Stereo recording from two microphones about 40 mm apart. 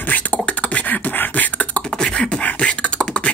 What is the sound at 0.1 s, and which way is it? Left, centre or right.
Beatboxing, left.